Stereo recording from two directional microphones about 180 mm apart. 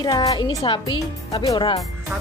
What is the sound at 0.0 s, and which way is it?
A woman's voice, 20° left (ahead or behind).